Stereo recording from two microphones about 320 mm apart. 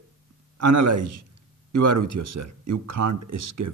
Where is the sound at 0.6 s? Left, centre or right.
Right.